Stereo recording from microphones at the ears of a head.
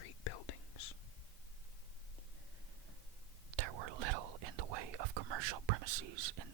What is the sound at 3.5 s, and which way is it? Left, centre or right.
Whispering, right.